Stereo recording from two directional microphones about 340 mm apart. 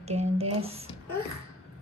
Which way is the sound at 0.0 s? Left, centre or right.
Centre.